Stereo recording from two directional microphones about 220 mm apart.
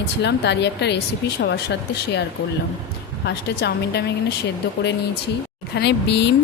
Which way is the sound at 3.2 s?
50° left (ahead or behind).